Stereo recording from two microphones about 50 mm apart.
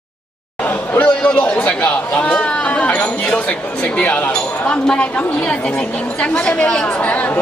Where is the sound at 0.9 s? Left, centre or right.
Left.